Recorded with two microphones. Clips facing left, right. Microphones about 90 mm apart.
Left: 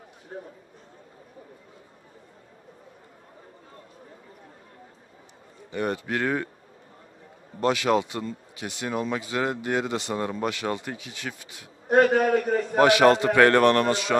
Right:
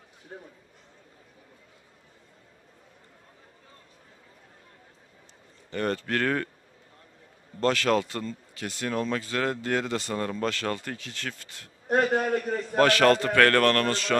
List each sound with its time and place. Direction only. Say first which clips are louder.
0.3 s speech: left 5 dB; 15° left (ahead or behind)
5.7 s speech: left 1 dB; 15° left (ahead or behind)
7.6 s speech: left 1 dB; 15° left (ahead or behind)
12.0 s a man's voice: left 6 dB; 55° left (ahead or behind)
12.7 s speech: left 2 dB; 15° left (ahead or behind)